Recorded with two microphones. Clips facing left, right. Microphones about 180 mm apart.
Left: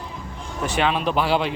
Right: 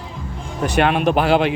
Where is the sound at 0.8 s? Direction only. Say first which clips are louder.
Right 5 dB; 60° right (ahead or behind).